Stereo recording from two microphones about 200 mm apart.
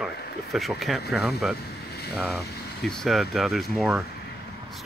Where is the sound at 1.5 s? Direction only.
55° left (ahead or behind).